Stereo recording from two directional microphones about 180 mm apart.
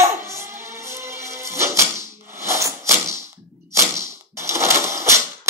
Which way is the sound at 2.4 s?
15° right (ahead or behind).